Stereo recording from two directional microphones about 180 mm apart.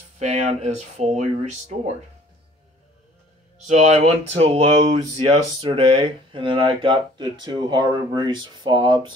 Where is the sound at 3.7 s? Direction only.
40° right (ahead or behind).